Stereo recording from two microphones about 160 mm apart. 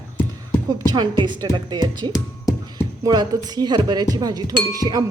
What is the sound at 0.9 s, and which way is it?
Speech, 30° right (ahead or behind).